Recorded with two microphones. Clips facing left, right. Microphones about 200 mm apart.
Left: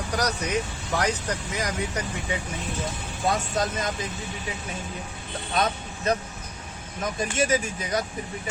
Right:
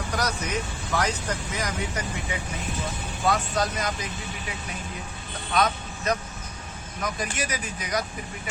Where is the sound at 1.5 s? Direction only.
20° left (ahead or behind).